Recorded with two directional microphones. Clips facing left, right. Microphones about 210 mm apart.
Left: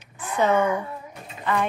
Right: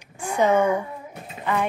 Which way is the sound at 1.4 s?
10° right (ahead or behind).